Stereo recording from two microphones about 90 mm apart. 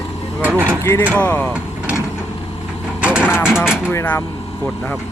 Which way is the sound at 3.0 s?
10° right (ahead or behind).